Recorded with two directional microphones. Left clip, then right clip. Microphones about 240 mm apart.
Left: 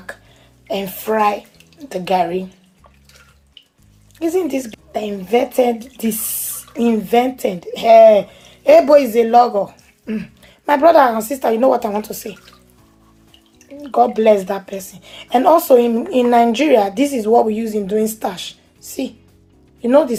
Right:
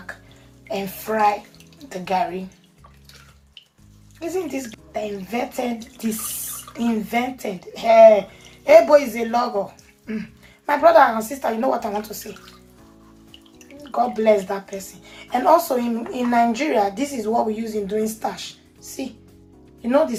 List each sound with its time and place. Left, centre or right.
0.7 s speech: left
4.2 s speech: left
6.7 s speech: left
13.8 s speech: left
19.8 s speech: left